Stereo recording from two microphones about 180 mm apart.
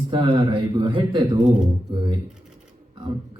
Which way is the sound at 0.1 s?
25° right (ahead or behind).